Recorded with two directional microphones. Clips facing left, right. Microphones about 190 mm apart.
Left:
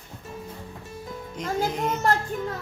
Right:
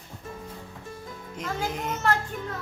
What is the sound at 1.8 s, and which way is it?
Speech, 40° left (ahead or behind).